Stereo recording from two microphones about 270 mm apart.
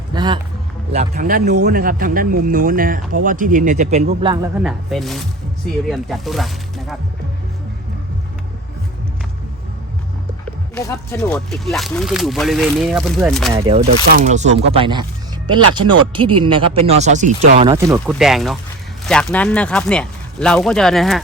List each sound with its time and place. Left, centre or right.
0.1 s a sound: centre
1.1 s speech: right
4.2 s speech: centre
4.6 s speech: centre
10.8 s speech: centre
13.5 s speech: centre
18.0 s speech: centre